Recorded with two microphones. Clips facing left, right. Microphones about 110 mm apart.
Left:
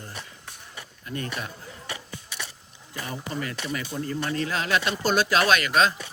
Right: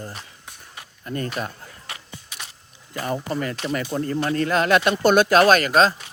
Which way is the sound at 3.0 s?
50° right (ahead or behind).